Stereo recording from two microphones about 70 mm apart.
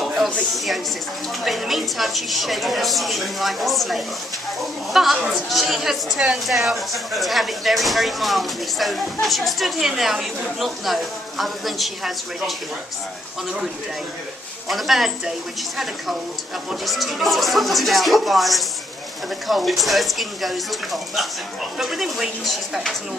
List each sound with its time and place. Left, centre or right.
0.0 s a sound: centre
0.4 s a woman's voice: centre
14.7 s a woman's voice: centre
16.8 s a woman's voice: centre